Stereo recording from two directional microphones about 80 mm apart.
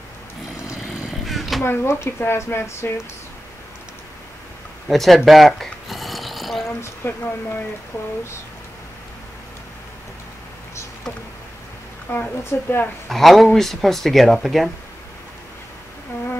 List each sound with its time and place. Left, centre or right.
1.2 s vehicle: centre
1.6 s speech: left
4.8 s a sound: centre
6.8 s speech: left
12.1 s speech: left
13.1 s speech: centre